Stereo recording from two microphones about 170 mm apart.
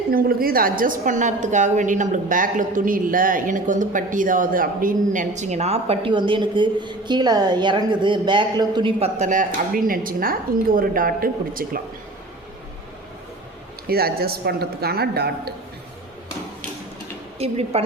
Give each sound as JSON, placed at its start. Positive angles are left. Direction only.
{"t": 0.1, "sound": "a woman's voice", "side_deg": -60}
{"t": 9.1, "sound": "speech", "side_deg": -45}
{"t": 13.8, "sound": "a woman's voice", "side_deg": -65}
{"t": 17.3, "sound": "a woman's voice", "side_deg": -35}